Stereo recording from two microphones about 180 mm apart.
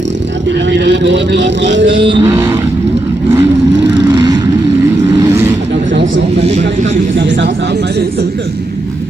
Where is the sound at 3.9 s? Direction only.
25° right (ahead or behind).